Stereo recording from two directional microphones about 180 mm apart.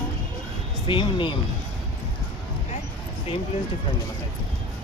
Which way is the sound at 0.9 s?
25° left (ahead or behind).